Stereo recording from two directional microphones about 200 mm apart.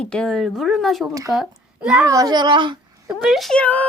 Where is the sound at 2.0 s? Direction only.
15° right (ahead or behind).